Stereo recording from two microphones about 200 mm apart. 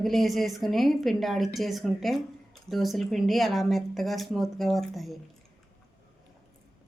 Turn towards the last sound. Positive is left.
turn(degrees=0)  # may be behind; listen again after turning